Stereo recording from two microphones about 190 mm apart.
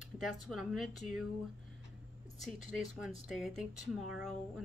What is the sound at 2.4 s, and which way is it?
Speech, centre (ahead or behind).